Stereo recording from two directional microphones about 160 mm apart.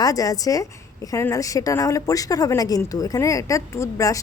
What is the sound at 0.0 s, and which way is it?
A woman's voice, 20° left (ahead or behind).